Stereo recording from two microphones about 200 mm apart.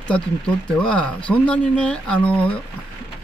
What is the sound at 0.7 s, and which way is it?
Speech, 5° left (ahead or behind).